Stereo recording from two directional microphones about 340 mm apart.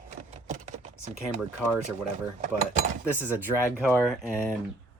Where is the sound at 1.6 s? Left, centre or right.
Centre.